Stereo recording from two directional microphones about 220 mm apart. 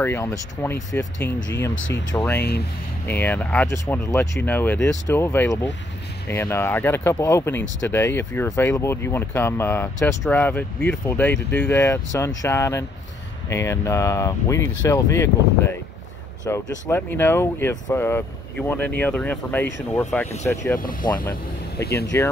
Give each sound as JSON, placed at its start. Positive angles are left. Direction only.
{"t": 0.0, "sound": "speech", "side_deg": 10}
{"t": 1.8, "sound": "speech", "side_deg": 60}
{"t": 2.1, "sound": "speech", "side_deg": 10}
{"t": 22.1, "sound": "speech", "side_deg": 10}